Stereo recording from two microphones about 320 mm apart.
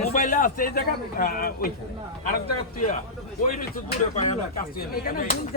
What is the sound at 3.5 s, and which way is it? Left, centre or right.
A man's voice, left.